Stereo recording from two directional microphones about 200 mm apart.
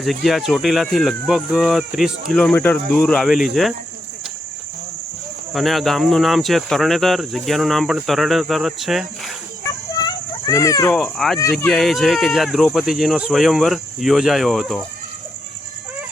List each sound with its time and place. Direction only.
0.0 s speech: centre (ahead or behind)
5.5 s speech: centre (ahead or behind)
9.9 s a sound: 20° left (ahead or behind)
10.9 s speech: centre (ahead or behind)